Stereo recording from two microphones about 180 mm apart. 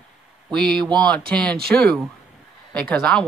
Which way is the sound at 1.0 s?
5° left (ahead or behind).